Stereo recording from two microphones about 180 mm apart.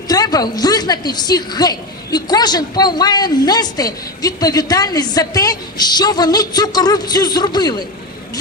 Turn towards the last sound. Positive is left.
turn(degrees=20)  # may be behind; listen again after turning